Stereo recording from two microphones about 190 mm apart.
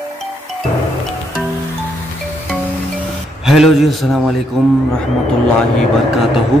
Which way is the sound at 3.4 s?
Centre (ahead or behind).